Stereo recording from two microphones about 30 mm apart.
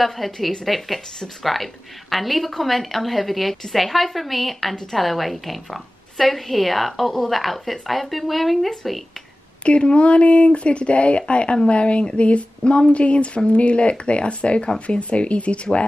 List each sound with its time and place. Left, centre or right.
0.0 s a woman's voice: centre
9.7 s speech: left